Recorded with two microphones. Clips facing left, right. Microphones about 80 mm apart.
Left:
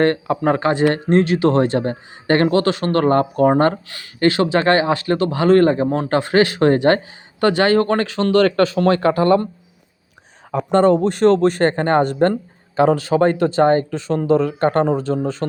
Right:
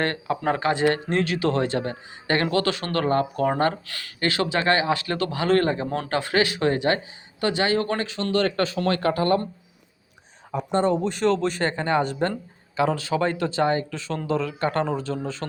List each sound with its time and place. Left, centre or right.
0.0 s speech: left
3.8 s speech: centre; by 8.8 s left
10.5 s speech: left